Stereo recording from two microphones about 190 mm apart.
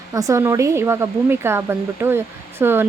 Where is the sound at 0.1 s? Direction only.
15° right (ahead or behind).